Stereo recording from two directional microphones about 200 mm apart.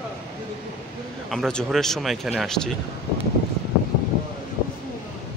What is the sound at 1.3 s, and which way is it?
Speech, centre (ahead or behind).